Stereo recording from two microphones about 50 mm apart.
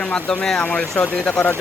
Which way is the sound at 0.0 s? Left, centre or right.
Centre.